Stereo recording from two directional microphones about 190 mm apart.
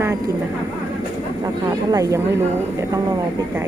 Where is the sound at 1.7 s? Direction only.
20° right (ahead or behind).